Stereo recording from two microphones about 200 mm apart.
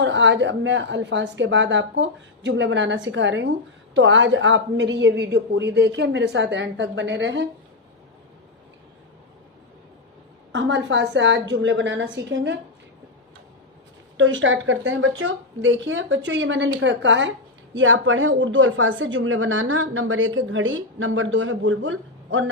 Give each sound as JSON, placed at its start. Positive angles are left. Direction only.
{"t": 0.0, "sound": "a woman's voice", "side_deg": -65}
{"t": 10.5, "sound": "a woman's voice", "side_deg": -65}
{"t": 14.2, "sound": "a woman's voice", "side_deg": -70}